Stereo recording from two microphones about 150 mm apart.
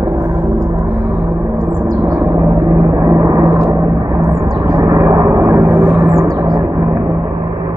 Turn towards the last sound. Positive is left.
turn(degrees=-15)  # may be behind; listen again after turning